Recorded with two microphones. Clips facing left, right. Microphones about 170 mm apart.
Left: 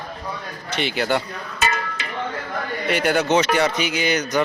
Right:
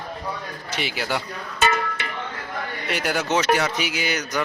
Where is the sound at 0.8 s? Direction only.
5° right (ahead or behind).